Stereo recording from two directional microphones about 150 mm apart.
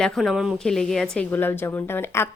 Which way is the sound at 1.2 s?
15° left (ahead or behind).